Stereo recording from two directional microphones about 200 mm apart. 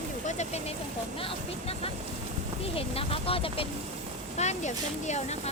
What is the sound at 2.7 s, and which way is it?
Speech, 30° left (ahead or behind).